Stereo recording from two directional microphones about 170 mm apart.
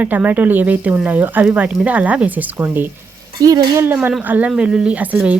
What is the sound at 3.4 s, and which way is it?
Speech, 20° right (ahead or behind).